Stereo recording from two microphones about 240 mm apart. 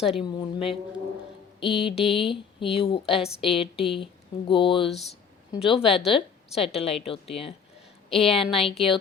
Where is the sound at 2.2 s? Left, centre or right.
Left.